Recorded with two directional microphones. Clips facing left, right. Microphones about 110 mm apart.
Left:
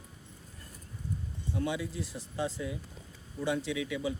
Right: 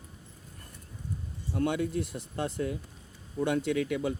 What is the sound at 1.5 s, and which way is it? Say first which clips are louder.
Speech: right 5 dB; 55° right (ahead or behind).